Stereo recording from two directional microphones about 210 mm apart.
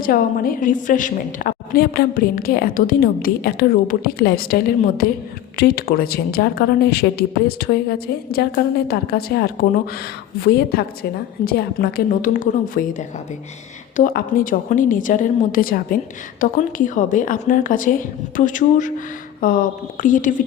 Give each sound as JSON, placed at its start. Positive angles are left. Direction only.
{"t": 0.0, "sound": "a woman's voice", "side_deg": 45}